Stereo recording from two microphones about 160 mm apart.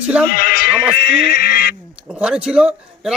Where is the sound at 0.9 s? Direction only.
85° left.